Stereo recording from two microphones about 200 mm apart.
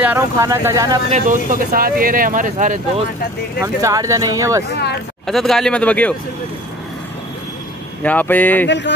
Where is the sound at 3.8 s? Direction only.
15° right (ahead or behind).